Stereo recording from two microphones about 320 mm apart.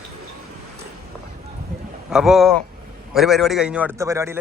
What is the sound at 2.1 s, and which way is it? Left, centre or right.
A man's voice, centre.